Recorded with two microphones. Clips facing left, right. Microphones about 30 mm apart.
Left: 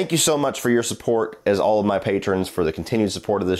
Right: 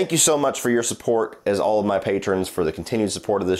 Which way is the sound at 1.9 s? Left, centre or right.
Centre.